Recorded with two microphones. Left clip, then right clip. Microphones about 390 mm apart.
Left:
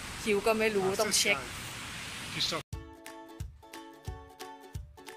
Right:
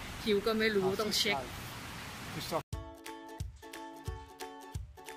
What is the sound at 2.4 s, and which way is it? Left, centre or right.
Speech, centre.